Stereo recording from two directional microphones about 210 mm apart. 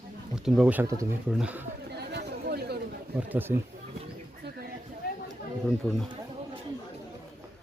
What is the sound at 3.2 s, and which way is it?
Speech, 10° right (ahead or behind).